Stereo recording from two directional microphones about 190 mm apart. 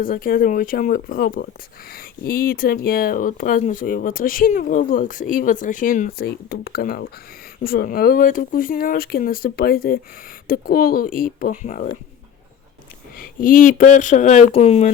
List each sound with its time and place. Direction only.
0.0 s speech: 50° left (ahead or behind)
13.1 s speech: 45° left (ahead or behind)